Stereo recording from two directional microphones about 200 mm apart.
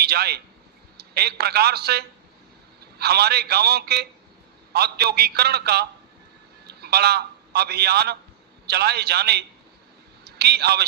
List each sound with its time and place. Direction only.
0.0 s a man's voice: 50° right (ahead or behind)